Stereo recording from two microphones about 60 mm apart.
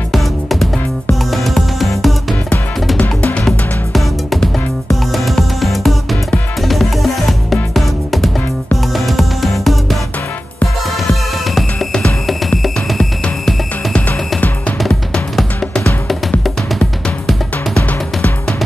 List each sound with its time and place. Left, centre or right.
0.1 s music: centre
3.0 s music: left
3.4 s music: centre
11.9 s music: centre